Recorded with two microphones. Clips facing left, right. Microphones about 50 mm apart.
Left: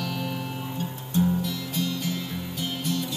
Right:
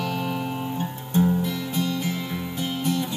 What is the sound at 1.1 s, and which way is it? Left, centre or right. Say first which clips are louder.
Music: right 3 dB; right.